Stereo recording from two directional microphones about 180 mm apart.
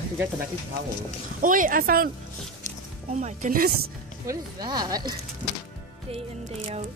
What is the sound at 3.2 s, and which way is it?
Speech, 50° right (ahead or behind).